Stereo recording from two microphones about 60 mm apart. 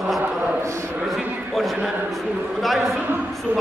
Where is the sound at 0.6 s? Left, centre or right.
Right.